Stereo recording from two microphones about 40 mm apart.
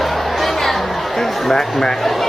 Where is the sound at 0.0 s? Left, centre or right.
Centre.